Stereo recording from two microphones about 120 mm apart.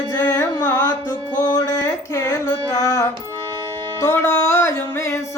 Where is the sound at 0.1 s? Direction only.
30° left (ahead or behind).